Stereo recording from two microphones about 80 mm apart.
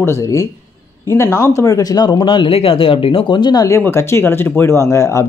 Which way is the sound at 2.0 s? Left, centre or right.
Left.